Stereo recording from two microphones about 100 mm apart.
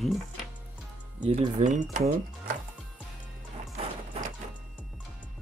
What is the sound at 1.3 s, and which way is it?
Speech, 90° right.